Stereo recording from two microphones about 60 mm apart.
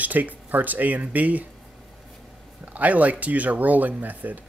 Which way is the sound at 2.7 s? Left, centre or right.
Right.